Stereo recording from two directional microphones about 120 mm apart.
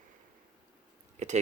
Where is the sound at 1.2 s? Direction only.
70° right (ahead or behind).